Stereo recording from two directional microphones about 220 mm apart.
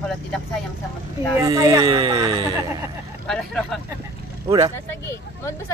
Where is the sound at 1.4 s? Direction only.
15° right (ahead or behind).